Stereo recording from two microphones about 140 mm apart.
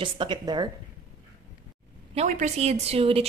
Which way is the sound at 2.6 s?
50° right (ahead or behind).